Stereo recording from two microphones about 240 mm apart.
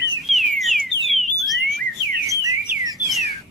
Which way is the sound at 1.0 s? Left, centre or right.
Centre.